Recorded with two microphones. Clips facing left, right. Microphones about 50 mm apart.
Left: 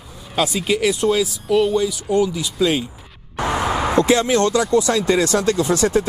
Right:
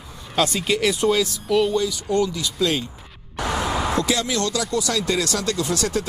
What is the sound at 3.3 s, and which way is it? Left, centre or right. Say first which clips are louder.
Speech: left 3 dB; left.